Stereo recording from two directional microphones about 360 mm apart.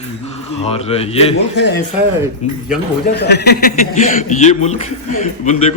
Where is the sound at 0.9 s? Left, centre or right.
Centre.